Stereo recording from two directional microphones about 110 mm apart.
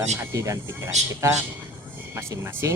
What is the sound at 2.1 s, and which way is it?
Speech, 25° right (ahead or behind).